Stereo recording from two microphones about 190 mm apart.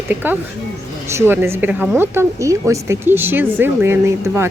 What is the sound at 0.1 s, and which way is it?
Speech, 10° right (ahead or behind).